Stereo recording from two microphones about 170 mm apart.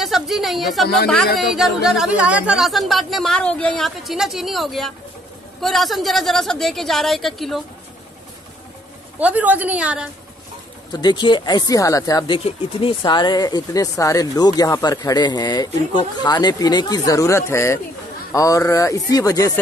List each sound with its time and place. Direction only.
0.0 s a woman's voice: centre (ahead or behind)
9.2 s a woman's voice: 10° right (ahead or behind)
10.9 s speech: 25° left (ahead or behind)